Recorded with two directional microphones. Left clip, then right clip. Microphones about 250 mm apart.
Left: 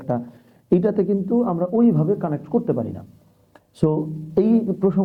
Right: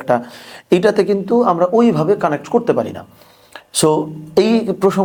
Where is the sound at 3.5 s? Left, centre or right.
Centre.